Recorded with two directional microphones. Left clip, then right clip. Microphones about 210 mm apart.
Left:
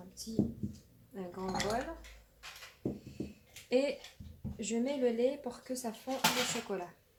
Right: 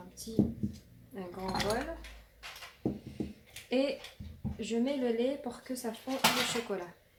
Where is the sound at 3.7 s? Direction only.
35° left (ahead or behind).